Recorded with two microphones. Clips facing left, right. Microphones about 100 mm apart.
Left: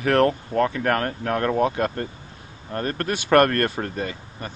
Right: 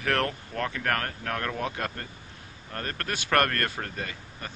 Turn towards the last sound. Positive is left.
turn(degrees=25)  # may be behind; listen again after turning